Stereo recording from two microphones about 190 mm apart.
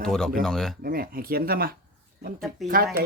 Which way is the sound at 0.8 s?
50° right (ahead or behind).